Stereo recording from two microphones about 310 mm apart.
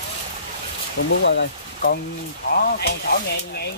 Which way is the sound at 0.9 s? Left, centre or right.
Left.